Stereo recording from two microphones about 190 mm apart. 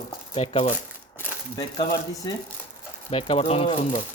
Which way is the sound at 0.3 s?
35° left (ahead or behind).